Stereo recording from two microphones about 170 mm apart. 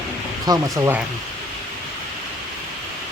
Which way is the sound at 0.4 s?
25° right (ahead or behind).